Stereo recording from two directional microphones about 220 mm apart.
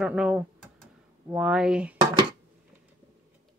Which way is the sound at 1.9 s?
20° right (ahead or behind).